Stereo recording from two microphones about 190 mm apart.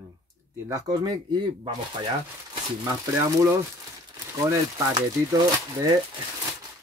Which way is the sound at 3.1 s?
15° right (ahead or behind).